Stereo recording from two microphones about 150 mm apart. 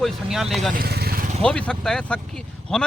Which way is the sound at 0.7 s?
85° right.